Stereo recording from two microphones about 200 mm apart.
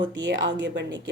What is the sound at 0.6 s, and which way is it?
Speech, 65° right (ahead or behind).